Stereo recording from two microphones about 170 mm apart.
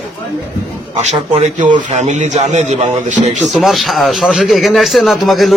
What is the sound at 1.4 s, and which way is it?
A man's voice, 45° right (ahead or behind).